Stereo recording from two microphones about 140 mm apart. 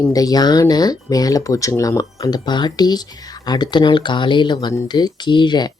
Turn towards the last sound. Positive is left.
turn(degrees=30)  # may be behind; listen again after turning